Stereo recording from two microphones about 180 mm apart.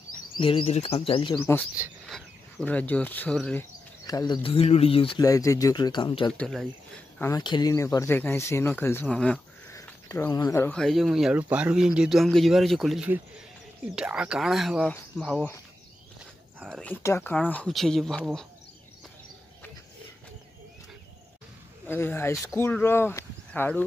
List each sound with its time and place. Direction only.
0.4 s speech: 30° left (ahead or behind)
1.4 s speech: 15° left (ahead or behind)
1.8 s speech: centre (ahead or behind)
4.0 s speech: 20° left (ahead or behind)
5.2 s speech: 20° left (ahead or behind)
6.3 s speech: centre (ahead or behind)
7.2 s speech: 20° left (ahead or behind)
9.7 s a sound: 15° left (ahead or behind)
10.8 s speech: centre (ahead or behind)
16.6 s speech: 5° left (ahead or behind)
21.8 s speech: 10° left (ahead or behind)